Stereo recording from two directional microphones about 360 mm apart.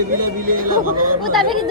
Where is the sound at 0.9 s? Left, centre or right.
Right.